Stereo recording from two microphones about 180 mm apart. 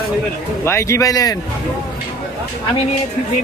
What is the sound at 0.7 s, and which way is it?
Speech, 15° left (ahead or behind).